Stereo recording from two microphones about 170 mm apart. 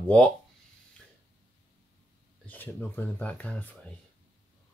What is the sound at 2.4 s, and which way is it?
Speech, 10° left (ahead or behind).